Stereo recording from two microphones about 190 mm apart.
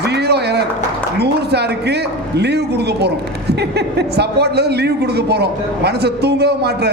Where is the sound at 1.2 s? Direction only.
60° right (ahead or behind).